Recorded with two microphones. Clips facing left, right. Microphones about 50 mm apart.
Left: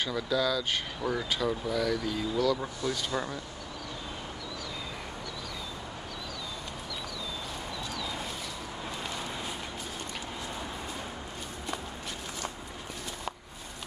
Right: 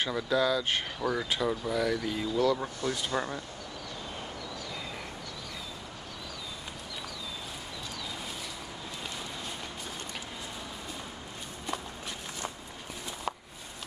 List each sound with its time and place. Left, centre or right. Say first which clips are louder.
0.0 s speech: right 1 dB; right
1.1 s speech: left 1 dB; centre
3.1 s speech: right 1 dB; centre